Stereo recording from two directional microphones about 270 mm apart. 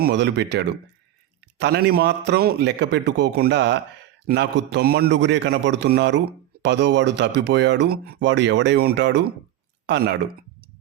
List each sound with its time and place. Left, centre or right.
0.0 s a man's voice: right